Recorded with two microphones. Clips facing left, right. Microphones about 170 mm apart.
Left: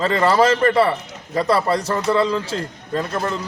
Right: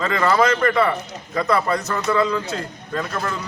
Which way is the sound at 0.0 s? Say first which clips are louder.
Left 2 dB; 30° left (ahead or behind).